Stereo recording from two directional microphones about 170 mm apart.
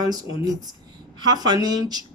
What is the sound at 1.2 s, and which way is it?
Speech, 25° right (ahead or behind).